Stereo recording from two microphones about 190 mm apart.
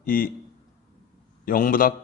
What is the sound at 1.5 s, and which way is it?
Speech, 45° left (ahead or behind).